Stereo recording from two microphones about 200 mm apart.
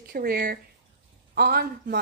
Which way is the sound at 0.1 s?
50° right (ahead or behind).